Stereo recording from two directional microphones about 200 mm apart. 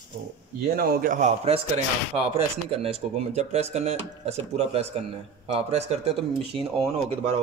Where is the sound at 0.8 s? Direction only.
45° right (ahead or behind).